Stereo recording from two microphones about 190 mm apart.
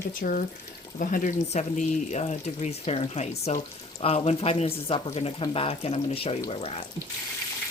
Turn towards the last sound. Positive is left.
turn(degrees=30)  # may be behind; listen again after turning